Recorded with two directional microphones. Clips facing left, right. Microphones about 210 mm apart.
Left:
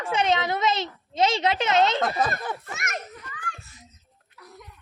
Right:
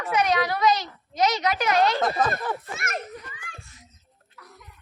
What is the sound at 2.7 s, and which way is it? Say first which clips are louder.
Speech: right 2 dB; 30° right (ahead or behind).